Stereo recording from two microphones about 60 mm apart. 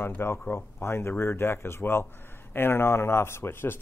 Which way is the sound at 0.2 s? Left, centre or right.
Left.